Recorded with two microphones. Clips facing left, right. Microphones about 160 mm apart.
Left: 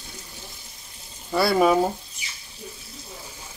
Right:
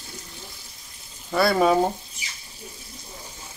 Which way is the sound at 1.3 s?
5° left (ahead or behind).